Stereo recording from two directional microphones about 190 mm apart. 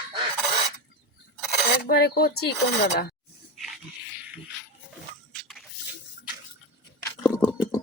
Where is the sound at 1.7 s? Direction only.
55° left (ahead or behind).